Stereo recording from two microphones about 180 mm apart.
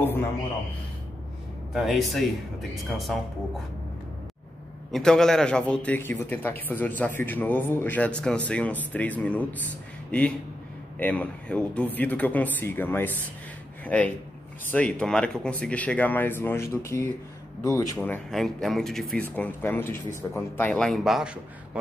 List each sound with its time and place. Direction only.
1.7 s speech: centre (ahead or behind)
4.9 s speech: 5° left (ahead or behind)
17.9 s speech: 5° left (ahead or behind)